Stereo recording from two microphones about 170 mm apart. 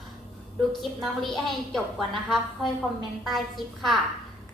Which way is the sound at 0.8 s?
Centre (ahead or behind).